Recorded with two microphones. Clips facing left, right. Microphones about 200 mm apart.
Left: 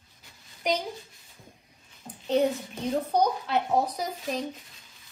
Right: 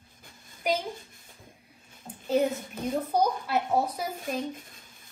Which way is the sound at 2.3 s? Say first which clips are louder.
Left 1 dB; 5° right (ahead or behind).